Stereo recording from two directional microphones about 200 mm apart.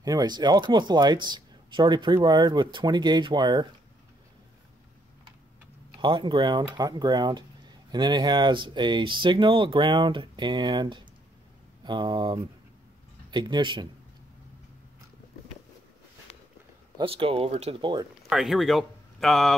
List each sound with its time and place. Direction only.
0.0 s speech: 20° right (ahead or behind)
5.9 s speech: 25° right (ahead or behind)
16.9 s speech: 25° right (ahead or behind)
18.3 s speech: centre (ahead or behind)